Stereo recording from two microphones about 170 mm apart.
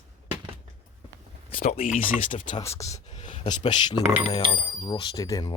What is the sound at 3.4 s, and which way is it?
Speech, 25° left (ahead or behind).